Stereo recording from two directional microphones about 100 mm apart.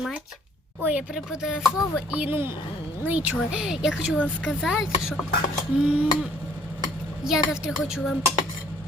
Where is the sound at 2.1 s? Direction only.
20° right (ahead or behind).